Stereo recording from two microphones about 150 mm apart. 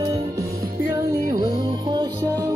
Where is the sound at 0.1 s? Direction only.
20° right (ahead or behind).